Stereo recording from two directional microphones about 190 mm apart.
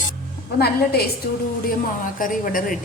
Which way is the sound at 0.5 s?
55° left (ahead or behind).